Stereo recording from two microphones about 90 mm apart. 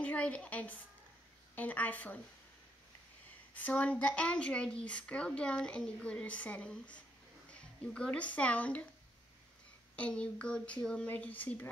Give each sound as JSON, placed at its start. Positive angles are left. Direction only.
{"t": 0.0, "sound": "a woman's voice", "side_deg": 15}
{"t": 3.5, "sound": "a woman's voice", "side_deg": 15}
{"t": 9.9, "sound": "a woman's voice", "side_deg": 15}